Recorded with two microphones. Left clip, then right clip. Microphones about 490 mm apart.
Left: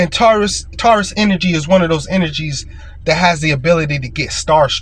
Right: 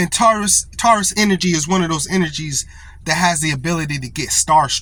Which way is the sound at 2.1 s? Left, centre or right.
Right.